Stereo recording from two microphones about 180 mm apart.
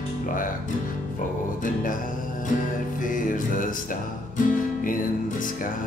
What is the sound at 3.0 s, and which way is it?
Music, 50° left (ahead or behind).